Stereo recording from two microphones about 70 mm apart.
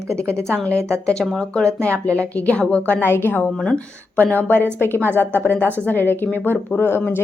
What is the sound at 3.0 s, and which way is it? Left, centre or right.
Speech, left.